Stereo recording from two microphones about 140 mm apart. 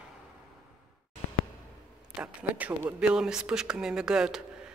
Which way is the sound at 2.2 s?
10° right (ahead or behind).